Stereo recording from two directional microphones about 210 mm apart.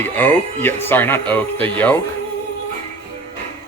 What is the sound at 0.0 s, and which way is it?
Speech, 10° left (ahead or behind).